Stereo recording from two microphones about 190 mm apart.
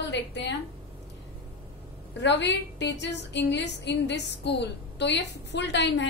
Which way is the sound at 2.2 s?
65° left (ahead or behind).